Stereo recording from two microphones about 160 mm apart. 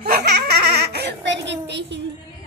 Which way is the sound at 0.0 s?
85° right.